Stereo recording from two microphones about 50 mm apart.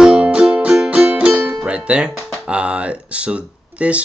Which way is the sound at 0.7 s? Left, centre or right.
Centre.